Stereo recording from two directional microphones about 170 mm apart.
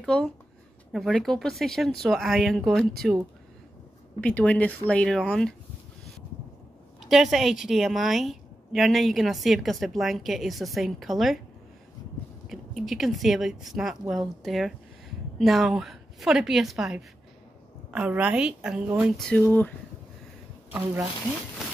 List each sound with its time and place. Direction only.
0.0 s a woman's voice: 5° left (ahead or behind)
4.2 s speech: 10° left (ahead or behind)
7.0 s a woman's voice: centre (ahead or behind)
12.4 s a woman's voice: centre (ahead or behind)
19.1 s speech: 5° left (ahead or behind)
20.7 s a woman's voice: 5° right (ahead or behind)